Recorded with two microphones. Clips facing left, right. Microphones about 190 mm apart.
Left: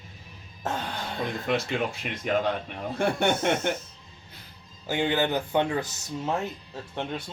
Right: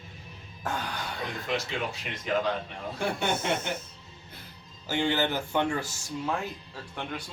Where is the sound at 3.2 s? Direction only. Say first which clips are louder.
Left 4 dB; 60° left (ahead or behind).